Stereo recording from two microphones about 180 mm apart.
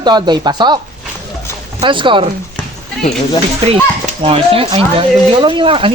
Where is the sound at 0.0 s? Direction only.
25° right (ahead or behind).